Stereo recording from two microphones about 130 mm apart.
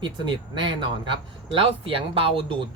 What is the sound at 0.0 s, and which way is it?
Speech, 35° right (ahead or behind).